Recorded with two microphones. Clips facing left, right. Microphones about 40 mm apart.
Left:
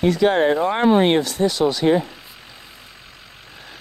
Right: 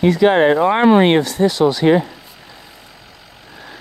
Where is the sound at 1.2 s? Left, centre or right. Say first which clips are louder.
Right 4 dB; centre.